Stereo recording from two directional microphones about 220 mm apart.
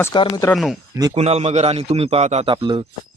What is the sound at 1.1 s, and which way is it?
A man's voice, 30° right (ahead or behind).